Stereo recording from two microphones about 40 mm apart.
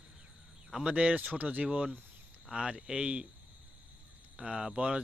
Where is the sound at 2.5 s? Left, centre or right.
Centre.